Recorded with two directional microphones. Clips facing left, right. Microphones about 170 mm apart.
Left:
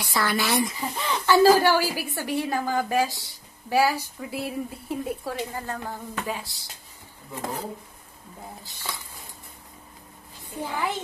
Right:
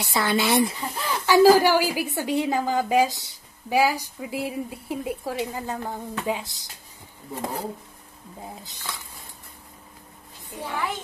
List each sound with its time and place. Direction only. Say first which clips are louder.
0.0 s speech: right 2 dB; 20° right (ahead or behind)
0.7 s a woman's voice: even; 5° right (ahead or behind)
8.4 s speech: right 3 dB; 20° right (ahead or behind)
10.6 s speech: left 1 dB; 10° left (ahead or behind)